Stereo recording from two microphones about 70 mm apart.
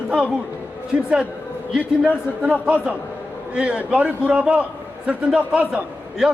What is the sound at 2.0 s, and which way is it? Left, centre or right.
A man's voice, centre.